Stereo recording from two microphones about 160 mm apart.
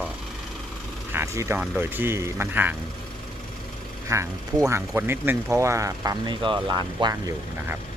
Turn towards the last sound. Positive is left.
turn(degrees=-25)  # may be behind; listen again after turning